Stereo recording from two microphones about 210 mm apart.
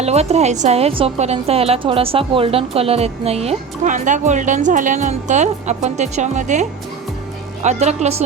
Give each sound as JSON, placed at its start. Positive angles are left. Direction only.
{"t": 0.0, "sound": "a woman's voice", "side_deg": -30}